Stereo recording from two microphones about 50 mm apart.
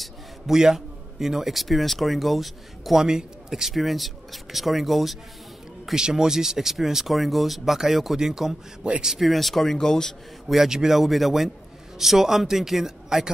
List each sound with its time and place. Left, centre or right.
0.0 s a man's voice: centre
5.9 s speech: centre
9.2 s speech: centre
10.5 s speech: centre